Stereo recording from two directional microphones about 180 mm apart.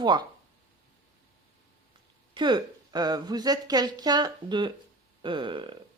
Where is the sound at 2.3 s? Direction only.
25° right (ahead or behind).